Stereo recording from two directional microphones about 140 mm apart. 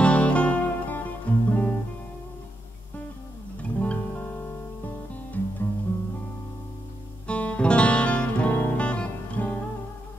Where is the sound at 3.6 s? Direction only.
10° left (ahead or behind).